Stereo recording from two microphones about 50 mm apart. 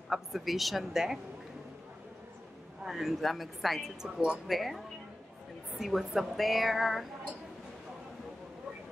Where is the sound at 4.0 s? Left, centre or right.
Centre.